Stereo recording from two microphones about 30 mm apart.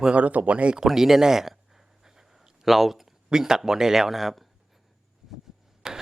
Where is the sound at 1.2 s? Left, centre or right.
Centre.